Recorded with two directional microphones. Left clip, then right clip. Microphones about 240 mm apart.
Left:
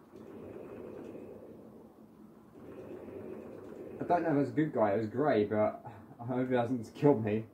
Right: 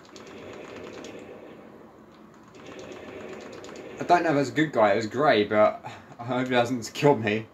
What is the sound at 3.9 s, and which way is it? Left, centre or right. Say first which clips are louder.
Speech: right 8 dB; right.